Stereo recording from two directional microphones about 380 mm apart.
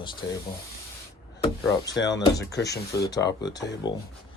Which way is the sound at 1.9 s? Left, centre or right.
Left.